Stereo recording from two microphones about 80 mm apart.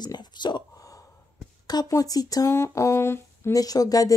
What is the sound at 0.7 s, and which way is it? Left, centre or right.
Gasp, left.